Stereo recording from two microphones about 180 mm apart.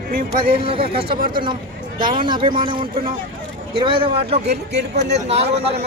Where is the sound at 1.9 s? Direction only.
50° right (ahead or behind).